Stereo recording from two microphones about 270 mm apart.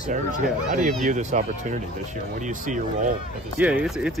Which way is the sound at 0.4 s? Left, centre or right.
Right.